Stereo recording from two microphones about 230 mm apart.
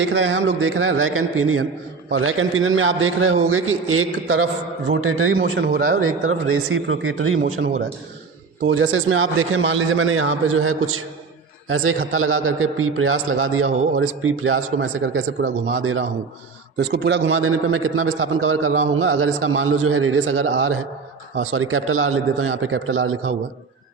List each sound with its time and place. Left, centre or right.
0.0 s a man's voice: right
5.3 s a man's voice: right
6.0 s a man's voice: right
8.6 s a man's voice: right
16.7 s a man's voice: right